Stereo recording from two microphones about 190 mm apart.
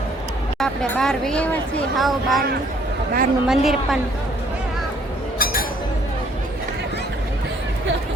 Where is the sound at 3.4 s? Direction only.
Centre (ahead or behind).